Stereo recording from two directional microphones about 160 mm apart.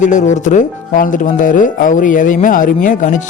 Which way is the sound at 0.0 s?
50° left (ahead or behind).